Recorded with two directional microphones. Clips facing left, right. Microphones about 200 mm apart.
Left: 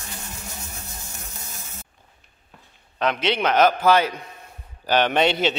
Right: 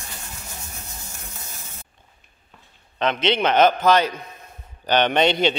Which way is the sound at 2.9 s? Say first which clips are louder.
Right 1 dB; 5° left (ahead or behind).